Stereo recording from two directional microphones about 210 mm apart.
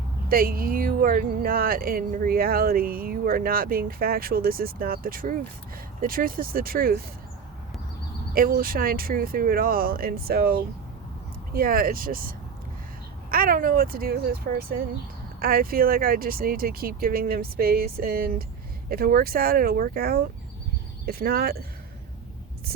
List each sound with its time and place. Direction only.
0.3 s speech: 45° right (ahead or behind)
8.4 s speech: 45° right (ahead or behind)
13.3 s speech: 45° right (ahead or behind)